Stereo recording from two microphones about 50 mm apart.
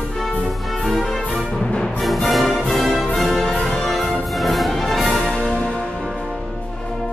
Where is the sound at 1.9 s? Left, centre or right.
Centre.